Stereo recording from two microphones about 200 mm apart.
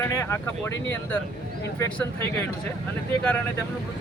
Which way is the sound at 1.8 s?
10° left (ahead or behind).